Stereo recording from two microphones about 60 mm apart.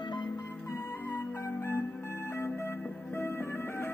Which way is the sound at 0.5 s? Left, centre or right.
Left.